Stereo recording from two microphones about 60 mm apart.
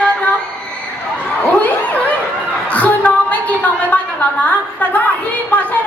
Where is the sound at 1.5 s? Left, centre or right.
Left.